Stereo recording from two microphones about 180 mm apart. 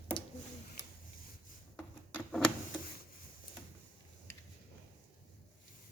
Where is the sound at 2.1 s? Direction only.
5° left (ahead or behind).